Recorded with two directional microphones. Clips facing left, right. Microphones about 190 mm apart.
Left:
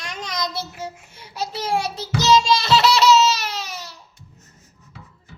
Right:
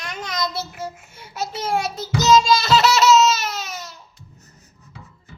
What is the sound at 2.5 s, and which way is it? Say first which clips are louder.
Baby laughter: even; 5° right (ahead or behind).